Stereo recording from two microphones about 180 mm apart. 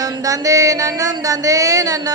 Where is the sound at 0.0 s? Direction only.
20° right (ahead or behind).